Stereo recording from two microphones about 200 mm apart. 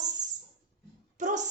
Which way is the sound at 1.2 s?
40° right (ahead or behind).